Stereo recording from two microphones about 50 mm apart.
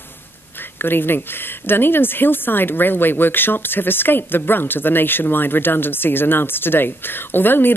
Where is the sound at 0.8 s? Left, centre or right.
Left.